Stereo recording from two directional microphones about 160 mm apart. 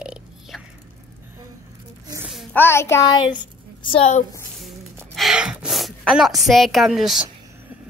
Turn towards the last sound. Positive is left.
turn(degrees=0)  # may be behind; listen again after turning